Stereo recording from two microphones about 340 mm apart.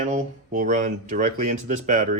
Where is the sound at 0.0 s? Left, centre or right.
Right.